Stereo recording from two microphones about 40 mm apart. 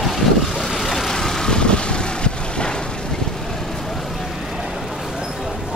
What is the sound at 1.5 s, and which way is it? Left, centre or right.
Vehicle, left.